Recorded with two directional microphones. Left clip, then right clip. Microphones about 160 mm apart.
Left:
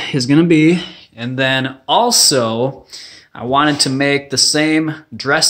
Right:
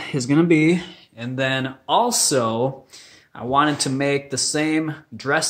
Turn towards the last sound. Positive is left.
turn(degrees=15)  # may be behind; listen again after turning